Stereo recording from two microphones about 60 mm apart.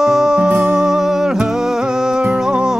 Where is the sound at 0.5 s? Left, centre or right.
Right.